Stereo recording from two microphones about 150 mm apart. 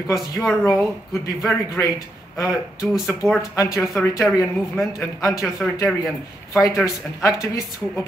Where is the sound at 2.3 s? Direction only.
20° left (ahead or behind).